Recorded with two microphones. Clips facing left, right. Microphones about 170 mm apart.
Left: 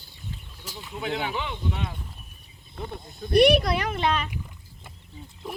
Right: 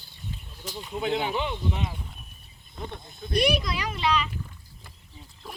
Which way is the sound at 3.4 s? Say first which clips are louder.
Left 6 dB; 60° left (ahead or behind).